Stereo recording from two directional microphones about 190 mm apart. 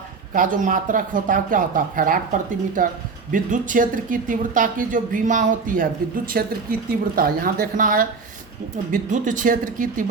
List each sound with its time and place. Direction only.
0.3 s speech: 45° right (ahead or behind)